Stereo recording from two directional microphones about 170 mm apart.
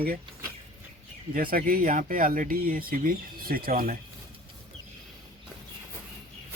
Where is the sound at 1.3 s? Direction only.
55° right (ahead or behind).